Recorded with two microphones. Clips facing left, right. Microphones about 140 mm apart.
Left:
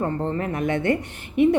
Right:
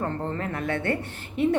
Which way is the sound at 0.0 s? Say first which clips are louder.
Left 4 dB; 15° left (ahead or behind).